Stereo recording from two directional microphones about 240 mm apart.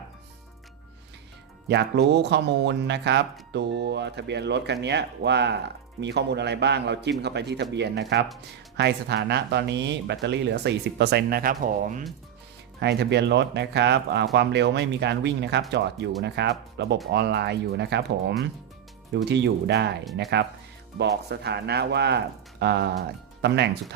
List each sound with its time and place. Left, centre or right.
1.6 s speech: right
12.8 s speech: right
21.0 s speech: right